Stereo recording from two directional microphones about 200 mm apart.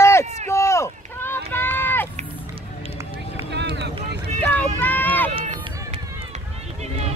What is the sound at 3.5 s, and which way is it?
Vehicle, 60° right (ahead or behind).